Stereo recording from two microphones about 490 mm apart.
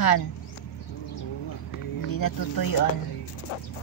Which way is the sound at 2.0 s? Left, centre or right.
Left.